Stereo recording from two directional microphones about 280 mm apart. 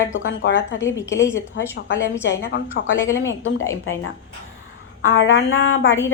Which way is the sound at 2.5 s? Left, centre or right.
Left.